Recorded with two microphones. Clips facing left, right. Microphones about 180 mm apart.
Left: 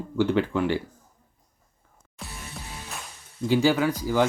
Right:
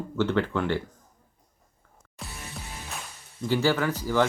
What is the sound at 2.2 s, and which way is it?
Music, centre (ahead or behind).